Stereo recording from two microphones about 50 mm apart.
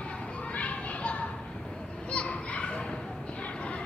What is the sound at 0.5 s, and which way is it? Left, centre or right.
Children playing, left.